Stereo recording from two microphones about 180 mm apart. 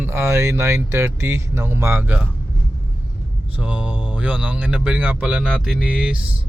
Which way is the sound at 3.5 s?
10° right (ahead or behind).